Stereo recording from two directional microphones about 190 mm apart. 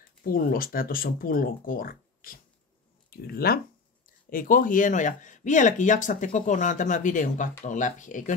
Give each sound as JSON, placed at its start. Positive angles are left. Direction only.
{"t": 0.2, "sound": "speech", "side_deg": 50}